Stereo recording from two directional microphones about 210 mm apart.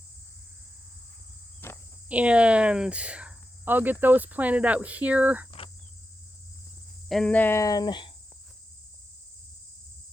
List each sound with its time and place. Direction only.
1.6 s cricket: 10° left (ahead or behind)
2.0 s speech: 5° right (ahead or behind)
5.5 s cricket: 25° left (ahead or behind)
7.1 s speech: 5° left (ahead or behind); by 8.1 s 20° left (ahead or behind)